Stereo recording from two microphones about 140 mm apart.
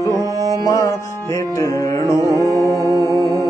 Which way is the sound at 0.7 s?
25° left (ahead or behind).